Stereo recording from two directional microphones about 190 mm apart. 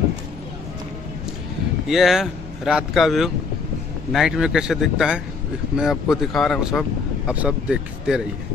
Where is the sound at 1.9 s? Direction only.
Centre (ahead or behind).